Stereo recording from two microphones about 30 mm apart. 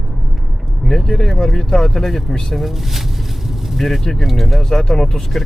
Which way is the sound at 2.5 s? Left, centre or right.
Centre.